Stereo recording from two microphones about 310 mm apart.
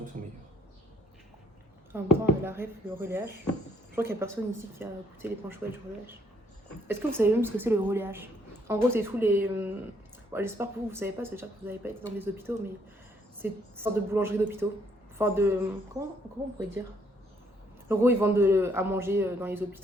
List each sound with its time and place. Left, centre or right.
0.1 s speech: right
1.9 s a woman's voice: centre
6.8 s a woman's voice: centre
17.8 s a woman's voice: centre